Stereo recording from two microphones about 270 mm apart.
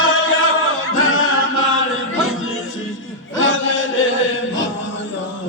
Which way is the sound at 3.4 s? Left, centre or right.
Left.